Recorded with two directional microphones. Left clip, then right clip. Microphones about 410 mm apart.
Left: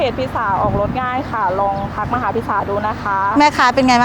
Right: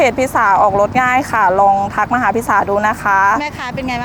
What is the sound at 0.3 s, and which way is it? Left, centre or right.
Speech, right.